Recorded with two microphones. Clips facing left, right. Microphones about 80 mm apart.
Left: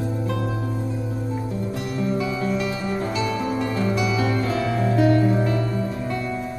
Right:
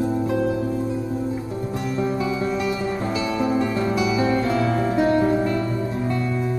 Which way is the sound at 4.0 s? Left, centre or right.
Right.